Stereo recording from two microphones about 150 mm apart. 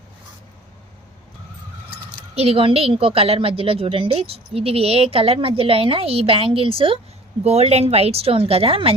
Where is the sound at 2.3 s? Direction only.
40° right (ahead or behind).